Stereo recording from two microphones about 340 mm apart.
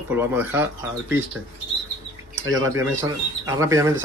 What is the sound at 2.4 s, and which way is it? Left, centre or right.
Speech, centre.